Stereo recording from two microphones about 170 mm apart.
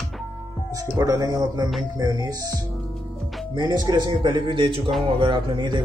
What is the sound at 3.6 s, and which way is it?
Speech, 25° right (ahead or behind).